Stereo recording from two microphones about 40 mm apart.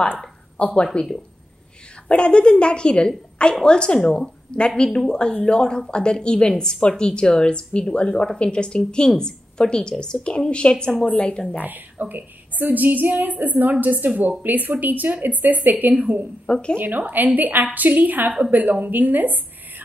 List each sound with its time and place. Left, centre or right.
0.6 s a woman's voice: left
1.0 s a woman's voice: left
5.3 s a woman's voice: left
11.1 s a woman's voice: left
11.6 s a woman's voice: right
16.4 s speech: left
16.7 s a woman's voice: right